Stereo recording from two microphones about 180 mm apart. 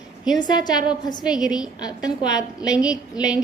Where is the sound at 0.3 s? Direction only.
25° left (ahead or behind).